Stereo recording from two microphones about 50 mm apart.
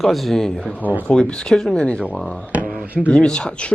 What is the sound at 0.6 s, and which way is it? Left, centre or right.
Speech, left.